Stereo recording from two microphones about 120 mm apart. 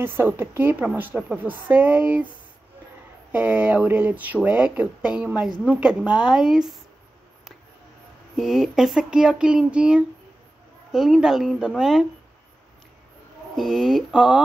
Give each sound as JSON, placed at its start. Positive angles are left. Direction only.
{"t": 0.0, "sound": "speech", "side_deg": -15}
{"t": 3.3, "sound": "speech", "side_deg": -15}
{"t": 8.4, "sound": "speech", "side_deg": -5}
{"t": 13.6, "sound": "speech", "side_deg": 0}